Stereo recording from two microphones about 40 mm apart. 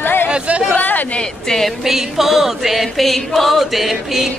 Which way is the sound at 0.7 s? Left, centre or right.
Left.